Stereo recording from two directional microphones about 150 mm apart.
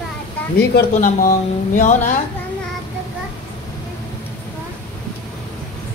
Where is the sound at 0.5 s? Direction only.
80° left; by 2.1 s 55° left (ahead or behind).